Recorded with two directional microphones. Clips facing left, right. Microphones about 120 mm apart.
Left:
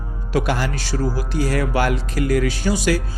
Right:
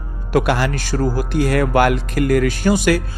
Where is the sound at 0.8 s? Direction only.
50° right (ahead or behind).